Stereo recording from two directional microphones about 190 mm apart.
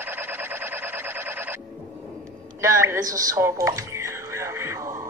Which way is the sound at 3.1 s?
15° right (ahead or behind).